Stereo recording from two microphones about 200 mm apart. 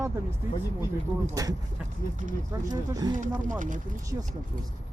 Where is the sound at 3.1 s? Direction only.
40° right (ahead or behind).